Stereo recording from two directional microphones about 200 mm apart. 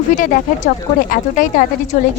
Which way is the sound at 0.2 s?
40° left (ahead or behind).